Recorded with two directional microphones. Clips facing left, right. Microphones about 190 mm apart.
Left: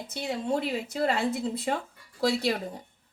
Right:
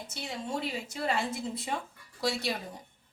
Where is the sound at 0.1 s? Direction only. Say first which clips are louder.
Left 7 dB; 60° left (ahead or behind).